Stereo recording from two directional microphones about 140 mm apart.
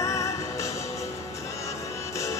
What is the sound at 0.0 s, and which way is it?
Music, 20° left (ahead or behind).